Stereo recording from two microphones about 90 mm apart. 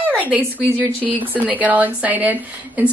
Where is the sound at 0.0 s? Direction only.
20° right (ahead or behind).